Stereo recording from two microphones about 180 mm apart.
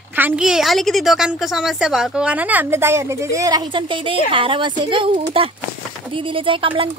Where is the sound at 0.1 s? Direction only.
5° right (ahead or behind).